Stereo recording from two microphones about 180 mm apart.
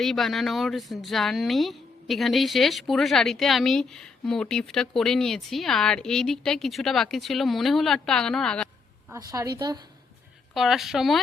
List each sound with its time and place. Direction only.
0.0 s a woman's voice: centre (ahead or behind)
9.1 s a woman's voice: 20° right (ahead or behind)
10.5 s a woman's voice: centre (ahead or behind)